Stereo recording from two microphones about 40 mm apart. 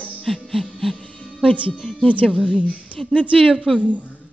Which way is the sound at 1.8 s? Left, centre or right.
Centre.